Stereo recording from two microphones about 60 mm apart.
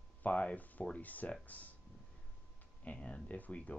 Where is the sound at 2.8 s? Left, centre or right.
Centre.